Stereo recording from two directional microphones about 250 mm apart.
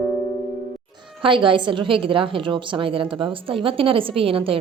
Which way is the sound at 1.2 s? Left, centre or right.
Centre.